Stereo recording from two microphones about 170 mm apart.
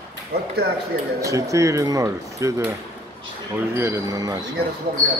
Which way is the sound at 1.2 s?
20° right (ahead or behind).